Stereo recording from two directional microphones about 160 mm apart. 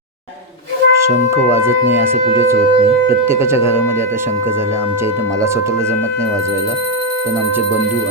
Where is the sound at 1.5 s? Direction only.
15° right (ahead or behind).